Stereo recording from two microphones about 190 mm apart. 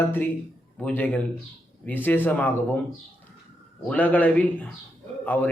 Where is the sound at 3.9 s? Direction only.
10° left (ahead or behind).